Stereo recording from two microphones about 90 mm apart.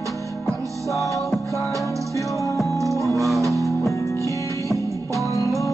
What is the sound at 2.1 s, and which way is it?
Music, 35° left (ahead or behind).